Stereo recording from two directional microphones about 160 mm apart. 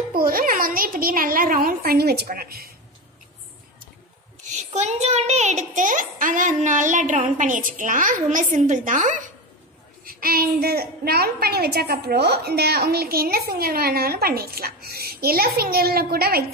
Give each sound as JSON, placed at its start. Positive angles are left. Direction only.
{"t": 0.1, "sound": "a child's voice", "side_deg": -65}
{"t": 4.7, "sound": "a child's voice", "side_deg": -45}
{"t": 10.0, "sound": "a woman's voice", "side_deg": -70}